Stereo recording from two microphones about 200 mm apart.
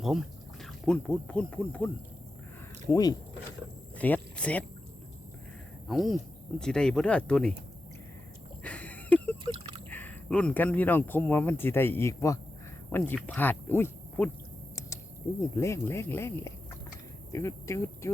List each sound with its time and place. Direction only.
0.0 s speech: centre (ahead or behind)
2.9 s speech: 20° left (ahead or behind)
3.9 s speech: 10° left (ahead or behind)
5.9 s speech: centre (ahead or behind)
8.6 s a sound: 5° left (ahead or behind)
9.4 s a sound: 25° right (ahead or behind)
9.9 s speech: 10° left (ahead or behind)
15.5 s speech: 15° left (ahead or behind)